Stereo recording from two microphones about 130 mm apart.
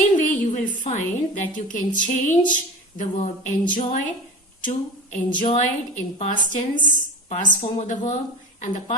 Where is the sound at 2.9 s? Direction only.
75° left (ahead or behind).